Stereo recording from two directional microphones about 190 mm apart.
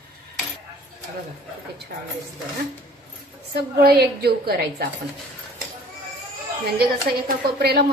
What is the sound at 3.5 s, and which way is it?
A woman's voice, 55° right (ahead or behind).